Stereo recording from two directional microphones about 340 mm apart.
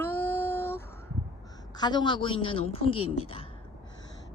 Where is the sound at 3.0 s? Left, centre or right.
Left.